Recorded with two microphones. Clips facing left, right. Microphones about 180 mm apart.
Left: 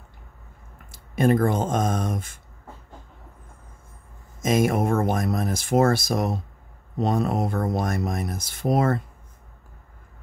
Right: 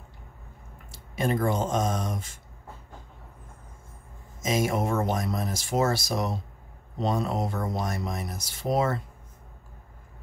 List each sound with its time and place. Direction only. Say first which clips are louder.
0.9 s speech: left 7 dB; 55° left (ahead or behind)
4.4 s speech: left 5 dB; 55° left (ahead or behind)